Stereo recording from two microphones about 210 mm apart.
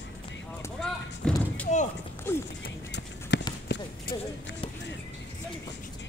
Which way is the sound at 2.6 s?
55° left (ahead or behind).